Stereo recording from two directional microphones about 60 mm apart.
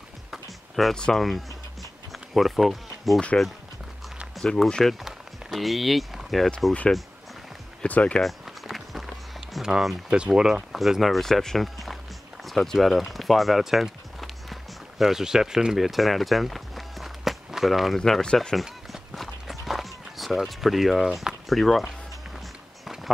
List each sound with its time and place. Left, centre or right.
0.3 s a sound: centre
0.9 s speech: centre
2.1 s bee: centre
4.6 s speech: centre
4.9 s speech: centre
7.8 s speech: centre
8.2 s run: centre
10.8 s speech: centre
12.4 s a sound: centre
18.0 s speech: centre
18.5 s run: centre